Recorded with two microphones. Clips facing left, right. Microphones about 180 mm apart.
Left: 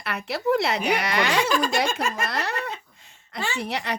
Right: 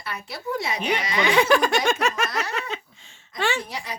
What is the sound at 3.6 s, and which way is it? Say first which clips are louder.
Speech: left 6 dB; 70° left (ahead or behind).